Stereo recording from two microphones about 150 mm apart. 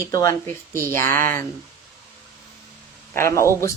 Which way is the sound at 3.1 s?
20° left (ahead or behind).